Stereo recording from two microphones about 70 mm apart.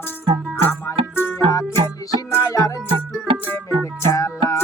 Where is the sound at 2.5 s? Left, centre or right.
Left.